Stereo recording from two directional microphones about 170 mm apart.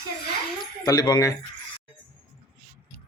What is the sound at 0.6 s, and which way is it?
Speech, 25° left (ahead or behind).